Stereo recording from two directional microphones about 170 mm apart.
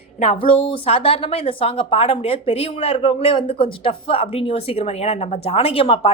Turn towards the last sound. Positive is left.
turn(degrees=35)  # may be behind; listen again after turning